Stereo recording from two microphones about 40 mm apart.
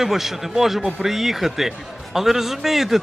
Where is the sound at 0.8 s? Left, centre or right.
Right.